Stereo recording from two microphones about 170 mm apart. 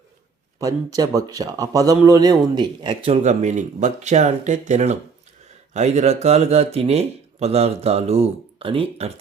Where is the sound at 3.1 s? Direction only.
45° right (ahead or behind).